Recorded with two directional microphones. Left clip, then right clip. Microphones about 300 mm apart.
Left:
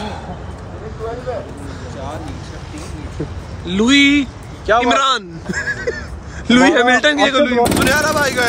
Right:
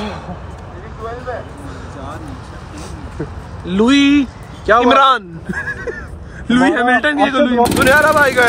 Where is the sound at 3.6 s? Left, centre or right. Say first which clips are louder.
Even; centre.